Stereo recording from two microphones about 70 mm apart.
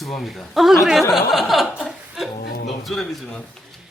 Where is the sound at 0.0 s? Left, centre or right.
Centre.